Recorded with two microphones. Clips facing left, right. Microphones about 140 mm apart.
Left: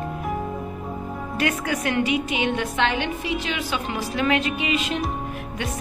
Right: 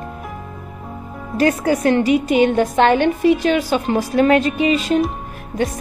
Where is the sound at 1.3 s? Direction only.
35° right (ahead or behind).